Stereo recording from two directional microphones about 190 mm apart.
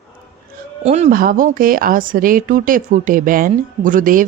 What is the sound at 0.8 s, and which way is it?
Speech, 35° right (ahead or behind).